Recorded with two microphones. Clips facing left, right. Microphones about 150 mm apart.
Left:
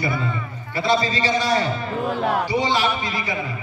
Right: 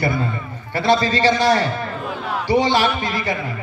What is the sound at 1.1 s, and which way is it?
A man's voice, 75° right (ahead or behind).